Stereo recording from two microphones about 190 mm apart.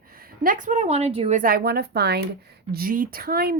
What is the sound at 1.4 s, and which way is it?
Speech, 50° right (ahead or behind).